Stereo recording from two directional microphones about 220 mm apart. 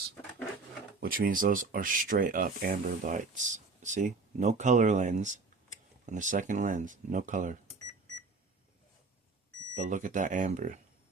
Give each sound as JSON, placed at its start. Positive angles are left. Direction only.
{"t": 0.9, "sound": "speech", "side_deg": -40}
{"t": 9.7, "sound": "speech", "side_deg": -35}